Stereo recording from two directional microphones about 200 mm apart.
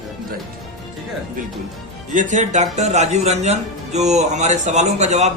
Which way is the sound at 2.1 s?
40° right (ahead or behind).